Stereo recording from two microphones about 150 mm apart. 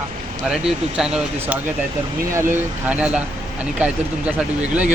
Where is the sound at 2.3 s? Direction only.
15° right (ahead or behind).